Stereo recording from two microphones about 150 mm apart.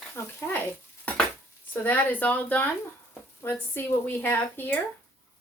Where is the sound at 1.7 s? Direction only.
10° left (ahead or behind).